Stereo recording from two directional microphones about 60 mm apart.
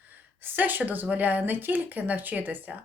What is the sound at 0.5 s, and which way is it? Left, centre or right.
Speech, right.